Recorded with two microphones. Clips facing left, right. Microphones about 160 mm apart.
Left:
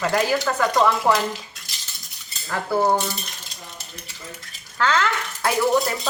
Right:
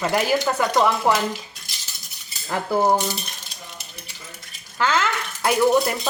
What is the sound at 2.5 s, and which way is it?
Speech, 15° right (ahead or behind).